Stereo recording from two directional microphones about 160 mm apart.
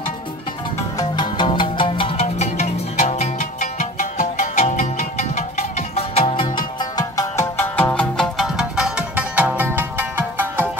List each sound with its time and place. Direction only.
0.9 s music: 30° left (ahead or behind)
6.8 s music: 20° left (ahead or behind); by 10.7 s 15° right (ahead or behind)